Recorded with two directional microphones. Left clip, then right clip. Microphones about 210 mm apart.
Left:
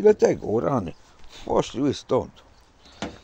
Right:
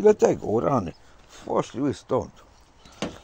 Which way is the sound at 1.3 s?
20° left (ahead or behind).